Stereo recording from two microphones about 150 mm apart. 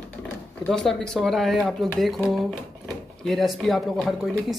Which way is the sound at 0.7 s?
5° left (ahead or behind).